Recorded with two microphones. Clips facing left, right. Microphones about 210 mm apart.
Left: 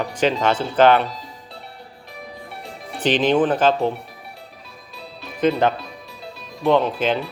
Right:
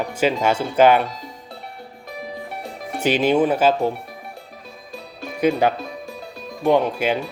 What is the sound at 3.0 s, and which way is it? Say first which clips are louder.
Speech: even; 10° right (ahead or behind).